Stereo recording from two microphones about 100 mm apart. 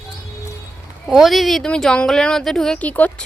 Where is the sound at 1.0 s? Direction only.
Centre (ahead or behind).